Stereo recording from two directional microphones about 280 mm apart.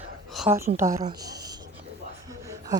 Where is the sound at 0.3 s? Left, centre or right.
Centre.